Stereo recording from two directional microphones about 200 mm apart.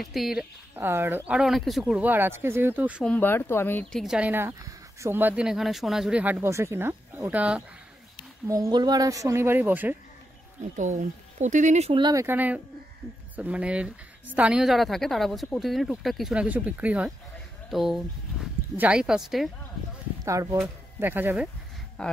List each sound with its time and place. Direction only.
0.0 s speech: centre (ahead or behind)
3.1 s speech: 10° left (ahead or behind)
4.0 s speech: 5° right (ahead or behind)
8.5 s speech: 15° right (ahead or behind)
10.8 s a woman's voice: 35° right (ahead or behind); by 19.5 s centre (ahead or behind)
20.2 s speech: 15° right (ahead or behind)
22.0 s a woman's voice: 5° left (ahead or behind)